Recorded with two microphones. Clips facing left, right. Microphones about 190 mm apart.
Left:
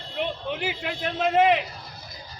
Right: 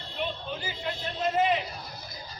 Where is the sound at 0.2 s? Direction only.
75° left (ahead or behind).